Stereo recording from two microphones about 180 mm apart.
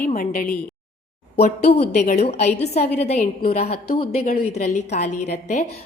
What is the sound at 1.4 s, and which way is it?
A woman's voice, 35° left (ahead or behind).